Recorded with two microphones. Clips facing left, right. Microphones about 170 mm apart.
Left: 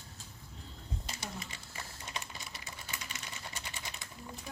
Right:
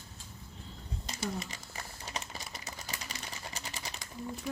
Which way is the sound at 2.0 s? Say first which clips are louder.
Right 3 dB; 40° right (ahead or behind).